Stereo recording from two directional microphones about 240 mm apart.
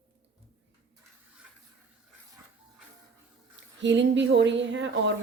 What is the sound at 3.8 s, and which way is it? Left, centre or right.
A woman's voice, right.